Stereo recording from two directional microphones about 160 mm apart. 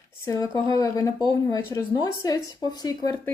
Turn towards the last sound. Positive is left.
turn(degrees=25)  # may be behind; listen again after turning